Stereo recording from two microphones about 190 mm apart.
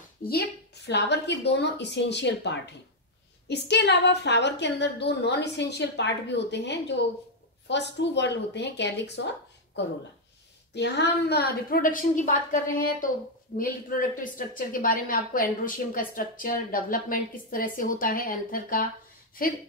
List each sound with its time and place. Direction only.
0.3 s a woman's voice: 55° left (ahead or behind)
10.7 s a woman's voice: 65° left (ahead or behind); by 18.9 s 50° left (ahead or behind)